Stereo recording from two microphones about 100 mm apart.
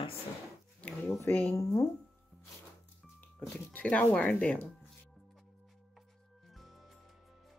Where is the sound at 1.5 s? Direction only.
30° left (ahead or behind).